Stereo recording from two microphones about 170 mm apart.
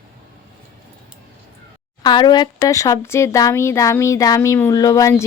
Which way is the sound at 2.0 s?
25° left (ahead or behind).